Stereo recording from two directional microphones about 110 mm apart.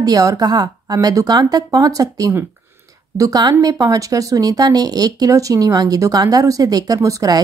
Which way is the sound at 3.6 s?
35° right (ahead or behind).